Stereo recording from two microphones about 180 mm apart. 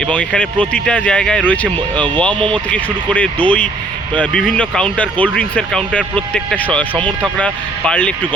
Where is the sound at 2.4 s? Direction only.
25° right (ahead or behind).